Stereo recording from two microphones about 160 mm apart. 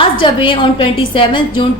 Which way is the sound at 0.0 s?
30° left (ahead or behind).